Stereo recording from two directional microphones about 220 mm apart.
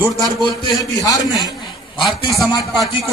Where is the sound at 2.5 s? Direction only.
15° left (ahead or behind).